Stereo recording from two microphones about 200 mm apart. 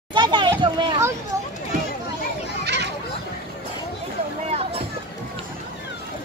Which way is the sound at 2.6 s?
60° right (ahead or behind).